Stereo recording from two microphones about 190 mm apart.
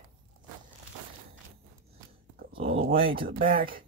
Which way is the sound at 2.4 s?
50° right (ahead or behind).